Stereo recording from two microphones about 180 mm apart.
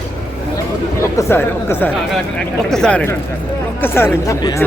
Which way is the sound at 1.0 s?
15° left (ahead or behind).